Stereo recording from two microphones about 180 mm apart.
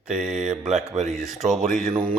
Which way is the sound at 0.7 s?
40° right (ahead or behind).